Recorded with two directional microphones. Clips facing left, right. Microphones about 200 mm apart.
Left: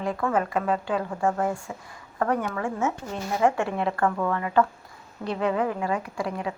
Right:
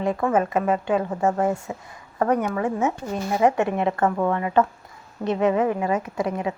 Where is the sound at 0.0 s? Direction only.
20° right (ahead or behind).